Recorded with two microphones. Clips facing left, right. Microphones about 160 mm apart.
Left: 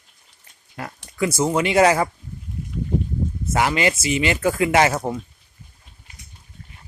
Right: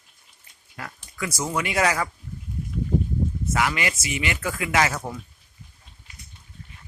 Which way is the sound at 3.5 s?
30° left (ahead or behind).